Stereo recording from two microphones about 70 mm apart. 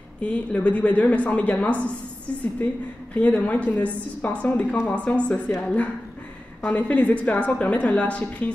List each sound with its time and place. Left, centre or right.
0.2 s a woman's voice: centre
3.2 s a woman's voice: centre
5.3 s a woman's voice: centre
6.6 s a woman's voice: left